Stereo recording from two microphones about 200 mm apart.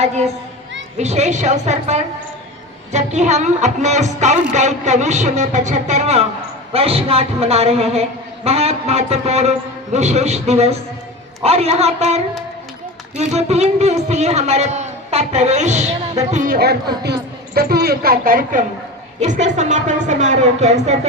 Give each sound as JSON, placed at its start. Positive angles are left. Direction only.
{"t": 0.9, "sound": "a woman's voice", "side_deg": -35}